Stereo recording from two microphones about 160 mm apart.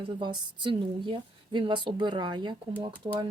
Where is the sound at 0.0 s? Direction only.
30° right (ahead or behind).